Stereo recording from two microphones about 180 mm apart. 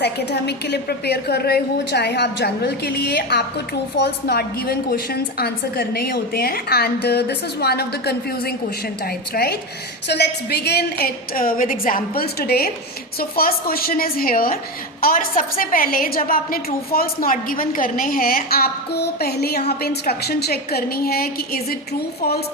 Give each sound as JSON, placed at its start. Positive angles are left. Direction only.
{"t": 0.0, "sound": "a woman's voice", "side_deg": 65}